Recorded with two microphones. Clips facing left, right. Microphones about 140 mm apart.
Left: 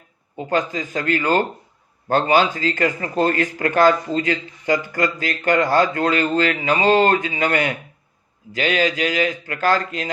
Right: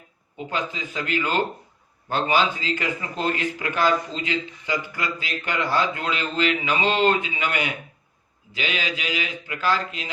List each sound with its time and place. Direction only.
0.3 s a man's voice: 45° left (ahead or behind)